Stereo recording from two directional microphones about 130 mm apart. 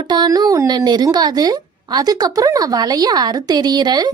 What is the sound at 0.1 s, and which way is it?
A woman's voice, 30° right (ahead or behind).